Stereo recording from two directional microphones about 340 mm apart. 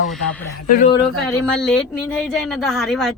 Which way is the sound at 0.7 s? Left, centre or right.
Left.